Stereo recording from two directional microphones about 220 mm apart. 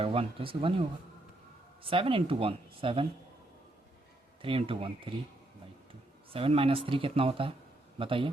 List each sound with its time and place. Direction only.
0.0 s speech: 25° right (ahead or behind)
4.4 s speech: 25° right (ahead or behind)
6.3 s speech: 25° right (ahead or behind)